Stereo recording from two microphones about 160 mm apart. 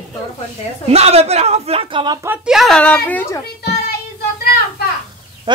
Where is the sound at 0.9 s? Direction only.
40° right (ahead or behind).